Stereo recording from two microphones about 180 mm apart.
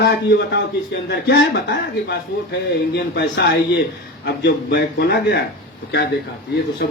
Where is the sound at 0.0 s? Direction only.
65° left (ahead or behind).